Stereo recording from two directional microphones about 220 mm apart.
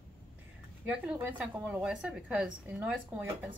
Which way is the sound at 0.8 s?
5° right (ahead or behind).